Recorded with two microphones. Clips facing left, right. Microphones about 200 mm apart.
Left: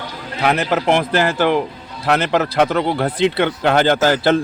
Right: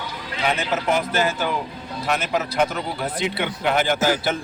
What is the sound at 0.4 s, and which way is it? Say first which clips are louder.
Speech: left 6 dB; 65° left (ahead or behind).